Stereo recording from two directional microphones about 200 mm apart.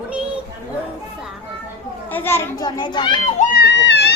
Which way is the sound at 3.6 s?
60° left (ahead or behind).